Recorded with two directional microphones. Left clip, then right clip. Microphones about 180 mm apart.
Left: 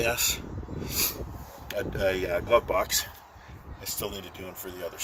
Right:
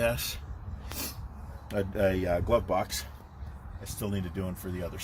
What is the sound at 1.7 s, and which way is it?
Speech, 15° left (ahead or behind).